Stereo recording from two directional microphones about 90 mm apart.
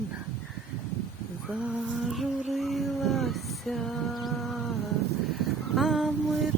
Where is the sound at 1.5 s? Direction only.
10° right (ahead or behind).